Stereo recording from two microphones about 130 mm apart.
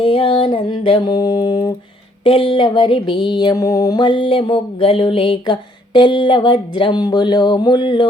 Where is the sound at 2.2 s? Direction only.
45° left (ahead or behind).